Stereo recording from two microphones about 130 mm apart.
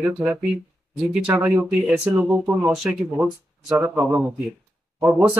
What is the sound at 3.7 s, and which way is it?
Speech, 15° right (ahead or behind).